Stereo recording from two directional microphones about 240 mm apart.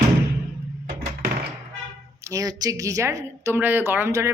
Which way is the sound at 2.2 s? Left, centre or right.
Centre.